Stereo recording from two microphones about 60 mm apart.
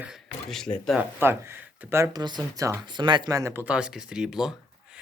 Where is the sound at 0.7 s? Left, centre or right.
Left.